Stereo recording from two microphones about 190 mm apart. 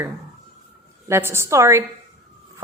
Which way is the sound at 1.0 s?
15° right (ahead or behind).